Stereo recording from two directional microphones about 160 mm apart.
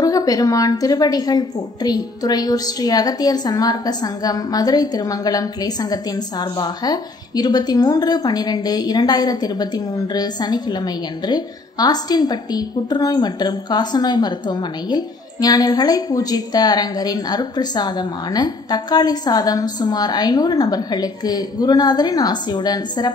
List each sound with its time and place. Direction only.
0.0 s a woman's voice: 25° left (ahead or behind)